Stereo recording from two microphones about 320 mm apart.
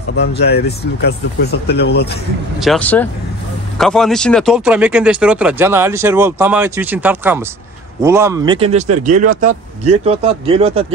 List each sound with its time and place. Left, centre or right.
0.2 s speech: left
2.6 s speech: centre